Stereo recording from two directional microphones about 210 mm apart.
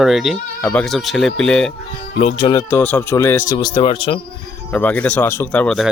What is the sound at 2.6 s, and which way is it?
Speech, 10° left (ahead or behind).